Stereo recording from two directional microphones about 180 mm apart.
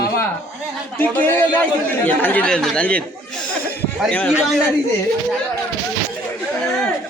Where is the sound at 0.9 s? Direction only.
10° left (ahead or behind).